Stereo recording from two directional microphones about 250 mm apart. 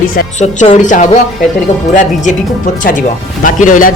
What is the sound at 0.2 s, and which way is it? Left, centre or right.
A woman's voice, left.